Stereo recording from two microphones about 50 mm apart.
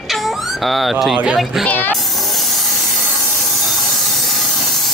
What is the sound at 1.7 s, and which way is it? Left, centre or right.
Speech, left.